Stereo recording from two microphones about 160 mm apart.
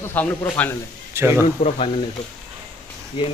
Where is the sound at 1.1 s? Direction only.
15° right (ahead or behind).